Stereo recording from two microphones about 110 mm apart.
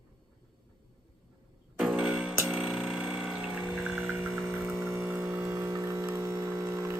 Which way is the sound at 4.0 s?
10° right (ahead or behind).